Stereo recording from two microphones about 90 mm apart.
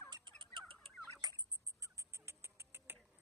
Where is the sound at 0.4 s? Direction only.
65° right (ahead or behind).